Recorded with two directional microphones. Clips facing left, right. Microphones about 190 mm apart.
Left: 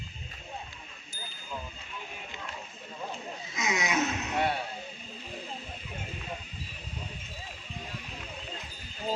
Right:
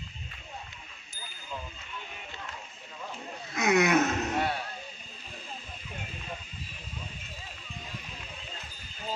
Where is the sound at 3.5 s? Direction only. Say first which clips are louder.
Right 7 dB; 60° right (ahead or behind).